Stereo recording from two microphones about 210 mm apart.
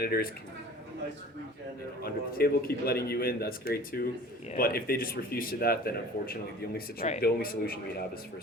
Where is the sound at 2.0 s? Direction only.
45° left (ahead or behind).